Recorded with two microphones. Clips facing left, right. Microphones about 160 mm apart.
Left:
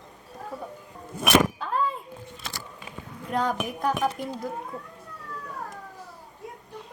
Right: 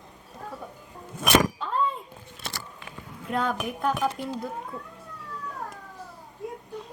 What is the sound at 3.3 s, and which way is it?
Speech, centre (ahead or behind).